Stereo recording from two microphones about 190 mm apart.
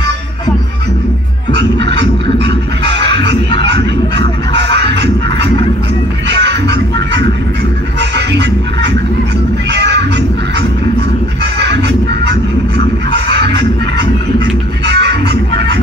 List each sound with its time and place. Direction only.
1.6 s music: 65° right (ahead or behind)
3.3 s music: 25° left (ahead or behind)
4.7 s music: 65° right (ahead or behind)
9.7 s cat: 65° right (ahead or behind)
13.1 s music: 65° right (ahead or behind)